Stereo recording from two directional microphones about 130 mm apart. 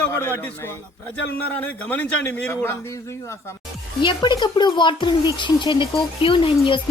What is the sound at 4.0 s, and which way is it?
Speech, 35° left (ahead or behind).